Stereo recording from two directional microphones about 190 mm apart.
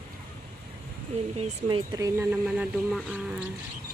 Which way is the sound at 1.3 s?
30° right (ahead or behind).